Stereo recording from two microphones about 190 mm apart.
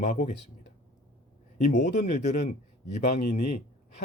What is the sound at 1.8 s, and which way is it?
Speech, 40° left (ahead or behind).